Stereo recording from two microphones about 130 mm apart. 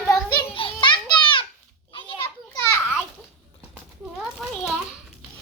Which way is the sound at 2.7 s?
15° left (ahead or behind).